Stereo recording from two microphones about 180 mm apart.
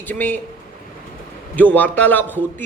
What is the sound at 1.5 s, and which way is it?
Speech, 10° left (ahead or behind).